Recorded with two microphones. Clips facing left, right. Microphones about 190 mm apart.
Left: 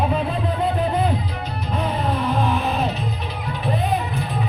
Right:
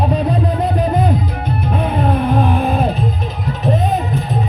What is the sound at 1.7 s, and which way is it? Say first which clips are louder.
Music: right 5 dB; 55° right (ahead or behind).